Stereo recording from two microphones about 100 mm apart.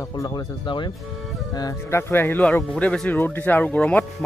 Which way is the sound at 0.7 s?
50° left (ahead or behind).